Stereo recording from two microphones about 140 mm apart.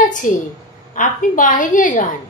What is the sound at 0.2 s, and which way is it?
A woman's voice, 65° left (ahead or behind).